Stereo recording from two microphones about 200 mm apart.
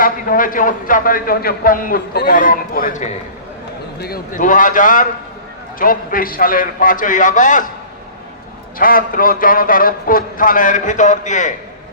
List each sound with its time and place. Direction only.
0.0 s a man's voice: 45° left (ahead or behind)
8.8 s a man's voice: 45° left (ahead or behind)